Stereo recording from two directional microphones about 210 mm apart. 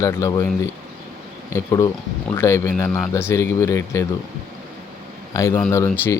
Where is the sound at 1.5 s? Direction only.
15° left (ahead or behind).